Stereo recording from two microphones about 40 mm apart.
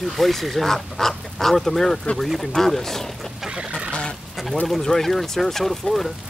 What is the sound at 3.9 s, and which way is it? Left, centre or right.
Bird, left.